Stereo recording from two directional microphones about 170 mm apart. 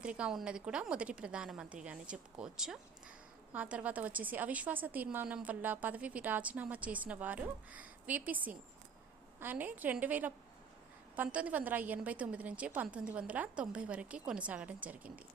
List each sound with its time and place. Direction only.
0.0 s a woman's voice: 5° right (ahead or behind)